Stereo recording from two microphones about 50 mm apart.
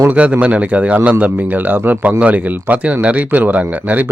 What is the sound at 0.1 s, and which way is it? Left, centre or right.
Speech, right.